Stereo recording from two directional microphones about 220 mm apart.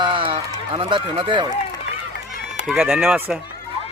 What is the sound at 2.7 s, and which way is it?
Speech, 5° right (ahead or behind).